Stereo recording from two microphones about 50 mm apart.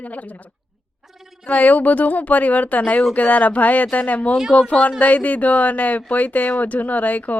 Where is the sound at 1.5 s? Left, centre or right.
Left.